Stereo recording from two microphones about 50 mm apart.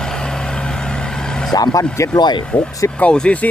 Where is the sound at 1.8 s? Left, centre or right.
Left.